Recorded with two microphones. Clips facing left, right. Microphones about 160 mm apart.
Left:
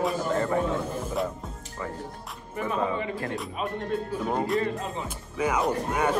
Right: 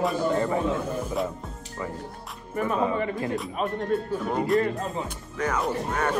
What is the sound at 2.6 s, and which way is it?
Speech, 45° right (ahead or behind).